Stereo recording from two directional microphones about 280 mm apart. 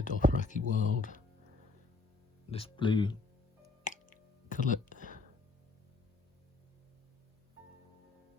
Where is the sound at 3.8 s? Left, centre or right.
Left.